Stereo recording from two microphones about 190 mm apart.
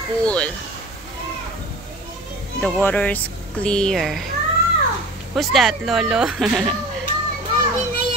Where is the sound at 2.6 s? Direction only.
10° left (ahead or behind).